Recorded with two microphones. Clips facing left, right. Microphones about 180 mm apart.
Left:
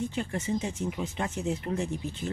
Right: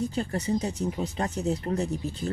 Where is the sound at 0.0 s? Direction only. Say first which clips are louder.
Right 3 dB; 35° right (ahead or behind).